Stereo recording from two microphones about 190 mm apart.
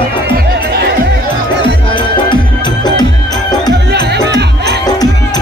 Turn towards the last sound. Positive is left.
turn(degrees=-60)  # may be behind; listen again after turning